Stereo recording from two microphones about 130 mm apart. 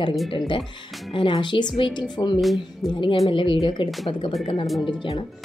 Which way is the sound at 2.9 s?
40° left (ahead or behind).